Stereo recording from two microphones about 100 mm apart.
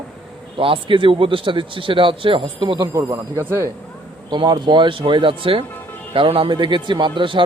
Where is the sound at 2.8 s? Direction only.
30° right (ahead or behind).